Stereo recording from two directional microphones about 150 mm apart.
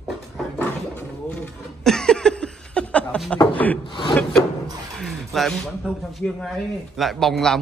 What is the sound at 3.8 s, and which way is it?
Speech, 35° left (ahead or behind).